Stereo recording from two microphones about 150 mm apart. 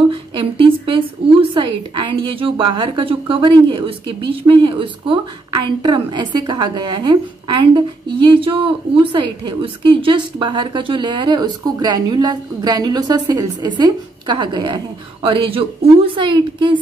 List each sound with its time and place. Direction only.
0.1 s a woman's voice: 35° right (ahead or behind)